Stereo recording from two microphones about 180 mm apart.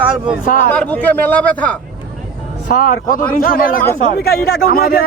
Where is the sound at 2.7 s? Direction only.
50° left (ahead or behind).